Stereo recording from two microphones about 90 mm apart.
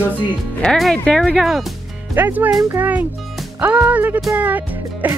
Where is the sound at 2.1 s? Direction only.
20° right (ahead or behind).